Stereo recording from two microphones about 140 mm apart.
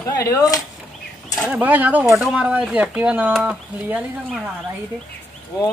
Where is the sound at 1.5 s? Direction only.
10° right (ahead or behind).